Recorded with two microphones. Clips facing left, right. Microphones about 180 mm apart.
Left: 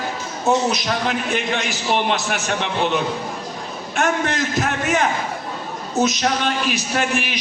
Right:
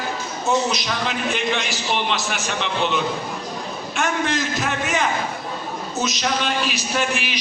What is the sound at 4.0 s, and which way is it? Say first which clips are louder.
A man's voice: left 2 dB; 55° left (ahead or behind).